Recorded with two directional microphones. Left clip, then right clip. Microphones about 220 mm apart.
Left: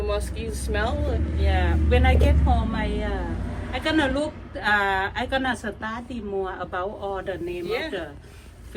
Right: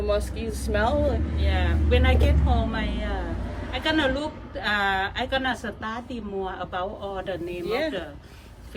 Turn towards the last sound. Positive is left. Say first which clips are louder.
# right 2 dB
turn(degrees=-45)  # may be behind; listen again after turning